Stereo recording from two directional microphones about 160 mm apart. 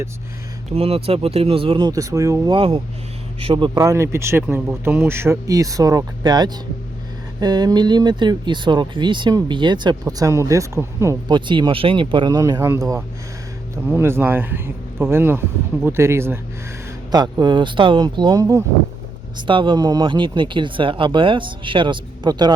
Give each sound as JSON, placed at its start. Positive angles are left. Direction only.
{"t": 0.7, "sound": "speech", "side_deg": -35}
{"t": 1.9, "sound": "speech", "side_deg": -20}
{"t": 2.5, "sound": "speech", "side_deg": -35}
{"t": 3.8, "sound": "speech", "side_deg": -20}